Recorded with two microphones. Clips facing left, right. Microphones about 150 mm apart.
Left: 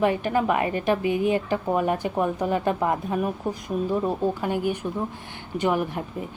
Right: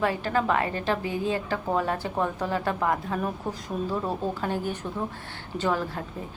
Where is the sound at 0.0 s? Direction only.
20° left (ahead or behind).